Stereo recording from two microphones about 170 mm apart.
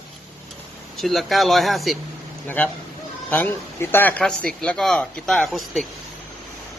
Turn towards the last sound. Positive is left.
turn(degrees=0)  # may be behind; listen again after turning